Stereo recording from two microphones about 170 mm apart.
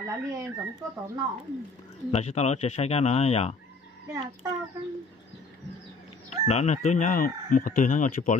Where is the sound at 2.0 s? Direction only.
40° left (ahead or behind).